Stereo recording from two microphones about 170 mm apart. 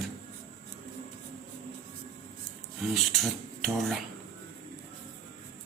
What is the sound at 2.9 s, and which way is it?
Speech, centre (ahead or behind).